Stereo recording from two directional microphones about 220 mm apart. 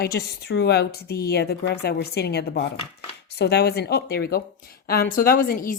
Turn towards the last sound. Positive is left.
turn(degrees=40)  # may be behind; listen again after turning